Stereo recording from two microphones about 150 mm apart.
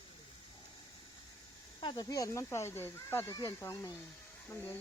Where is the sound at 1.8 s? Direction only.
30° left (ahead or behind).